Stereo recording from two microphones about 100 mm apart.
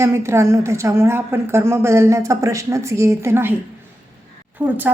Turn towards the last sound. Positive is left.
turn(degrees=-15)  # may be behind; listen again after turning